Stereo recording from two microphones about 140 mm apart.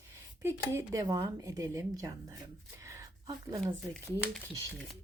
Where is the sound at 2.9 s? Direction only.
25° right (ahead or behind).